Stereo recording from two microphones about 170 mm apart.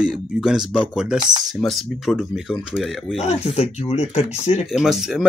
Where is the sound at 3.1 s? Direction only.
40° left (ahead or behind).